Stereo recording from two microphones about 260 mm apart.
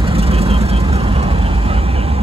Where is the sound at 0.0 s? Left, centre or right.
Right.